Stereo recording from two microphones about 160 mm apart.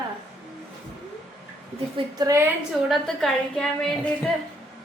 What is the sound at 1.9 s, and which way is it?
Speech, 20° right (ahead or behind).